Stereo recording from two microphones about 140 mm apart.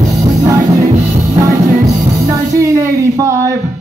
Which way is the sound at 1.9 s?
20° right (ahead or behind).